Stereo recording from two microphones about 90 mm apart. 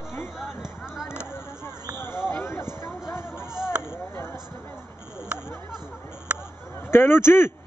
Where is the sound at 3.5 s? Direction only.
5° right (ahead or behind).